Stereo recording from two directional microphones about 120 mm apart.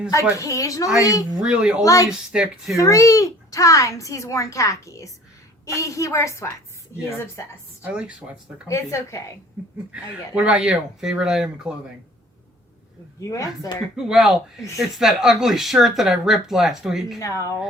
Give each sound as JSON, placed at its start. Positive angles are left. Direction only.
{"t": 0.1, "sound": "speech", "side_deg": 25}
{"t": 1.4, "sound": "speech", "side_deg": -5}
{"t": 1.8, "sound": "speech", "side_deg": 30}
{"t": 2.0, "sound": "speech", "side_deg": -5}
{"t": 2.7, "sound": "speech", "side_deg": 25}
{"t": 7.9, "sound": "speech", "side_deg": -10}
{"t": 8.6, "sound": "speech", "side_deg": 25}
{"t": 9.9, "sound": "speech", "side_deg": -10}
{"t": 13.1, "sound": "speech", "side_deg": 25}
{"t": 13.9, "sound": "speech", "side_deg": -5}
{"t": 17.2, "sound": "speech", "side_deg": 30}